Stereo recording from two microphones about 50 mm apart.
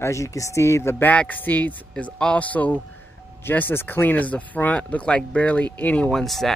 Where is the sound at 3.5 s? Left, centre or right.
Left.